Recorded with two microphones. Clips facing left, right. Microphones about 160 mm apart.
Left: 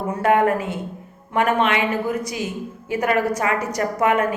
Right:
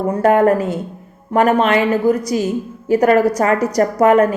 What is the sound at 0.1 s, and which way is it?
Speech, 40° right (ahead or behind).